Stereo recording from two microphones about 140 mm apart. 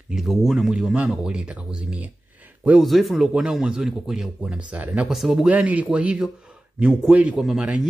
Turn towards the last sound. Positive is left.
turn(degrees=-5)  # may be behind; listen again after turning